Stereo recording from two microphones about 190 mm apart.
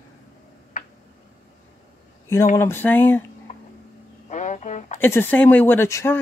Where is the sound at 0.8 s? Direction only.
40° left (ahead or behind).